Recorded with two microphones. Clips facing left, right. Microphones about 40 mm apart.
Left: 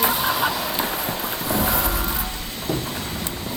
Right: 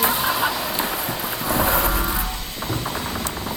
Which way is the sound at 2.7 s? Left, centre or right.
Centre.